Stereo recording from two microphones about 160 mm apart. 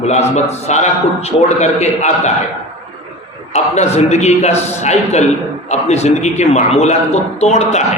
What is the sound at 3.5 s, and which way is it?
A man's voice, 45° left (ahead or behind).